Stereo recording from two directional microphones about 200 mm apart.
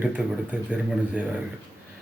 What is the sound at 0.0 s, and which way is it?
Speech, 5° right (ahead or behind).